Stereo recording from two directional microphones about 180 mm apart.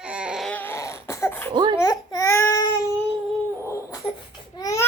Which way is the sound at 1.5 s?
25° right (ahead or behind).